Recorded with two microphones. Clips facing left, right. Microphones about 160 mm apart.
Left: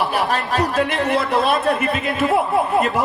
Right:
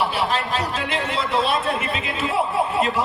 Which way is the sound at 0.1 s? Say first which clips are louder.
Left 3 dB; 45° left (ahead or behind).